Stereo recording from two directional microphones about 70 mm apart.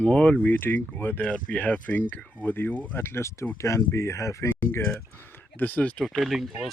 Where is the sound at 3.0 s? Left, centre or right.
Left.